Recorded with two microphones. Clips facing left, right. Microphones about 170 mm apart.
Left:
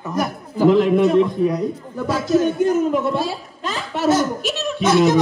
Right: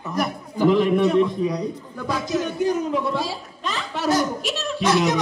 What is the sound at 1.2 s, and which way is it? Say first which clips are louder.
A man's voice: left 3 dB; 5° left (ahead or behind).